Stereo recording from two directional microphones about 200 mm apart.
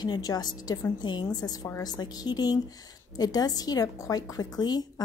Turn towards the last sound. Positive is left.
turn(degrees=20)  # may be behind; listen again after turning